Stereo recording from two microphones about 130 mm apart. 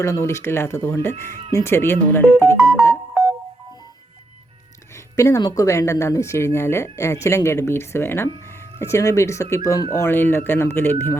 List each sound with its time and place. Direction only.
0.0 s speech: 20° left (ahead or behind)
5.1 s speech: 25° left (ahead or behind)